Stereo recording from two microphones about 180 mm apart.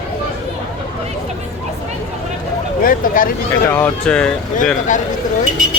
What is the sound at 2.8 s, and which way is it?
Speech, 50° left (ahead or behind).